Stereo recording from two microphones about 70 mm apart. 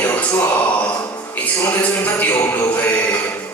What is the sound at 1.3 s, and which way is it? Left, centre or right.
Speech, left.